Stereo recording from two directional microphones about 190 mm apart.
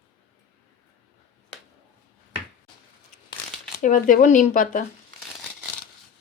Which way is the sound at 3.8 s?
45° left (ahead or behind).